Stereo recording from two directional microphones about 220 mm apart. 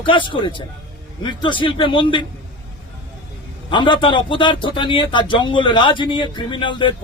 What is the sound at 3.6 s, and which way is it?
A man's voice, 20° left (ahead or behind).